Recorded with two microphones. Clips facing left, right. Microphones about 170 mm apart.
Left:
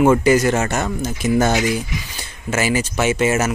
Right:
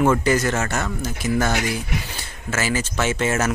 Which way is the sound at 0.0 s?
15° left (ahead or behind).